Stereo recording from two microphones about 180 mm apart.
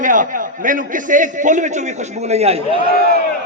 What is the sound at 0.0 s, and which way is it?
A man's voice, 45° right (ahead or behind).